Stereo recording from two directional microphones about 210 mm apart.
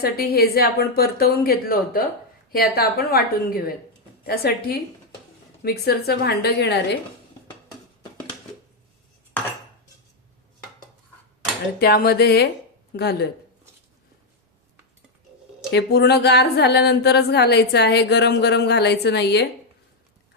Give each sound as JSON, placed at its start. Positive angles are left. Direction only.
{"t": 0.0, "sound": "a woman's voice", "side_deg": 45}
{"t": 11.8, "sound": "a woman's voice", "side_deg": 45}
{"t": 15.7, "sound": "a woman's voice", "side_deg": 50}